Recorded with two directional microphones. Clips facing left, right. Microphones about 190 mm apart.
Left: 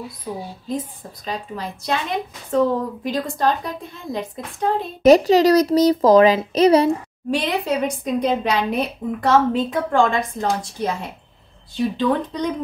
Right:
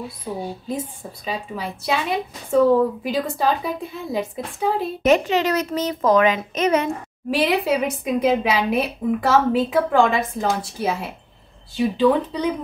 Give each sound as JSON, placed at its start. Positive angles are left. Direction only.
{"t": 0.2, "sound": "a woman's voice", "side_deg": -10}
{"t": 5.0, "sound": "a child's voice", "side_deg": 35}
{"t": 7.2, "sound": "a woman's voice", "side_deg": -5}